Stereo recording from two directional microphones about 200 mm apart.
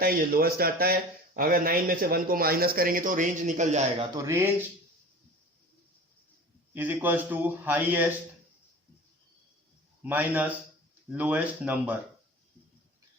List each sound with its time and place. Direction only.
0.0 s speech: 45° right (ahead or behind)
4.1 s a man's voice: 15° right (ahead or behind)
6.7 s a man's voice: 10° right (ahead or behind)
10.0 s a man's voice: 10° right (ahead or behind)